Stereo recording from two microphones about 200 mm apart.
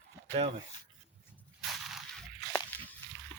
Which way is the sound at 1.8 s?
Centre (ahead or behind).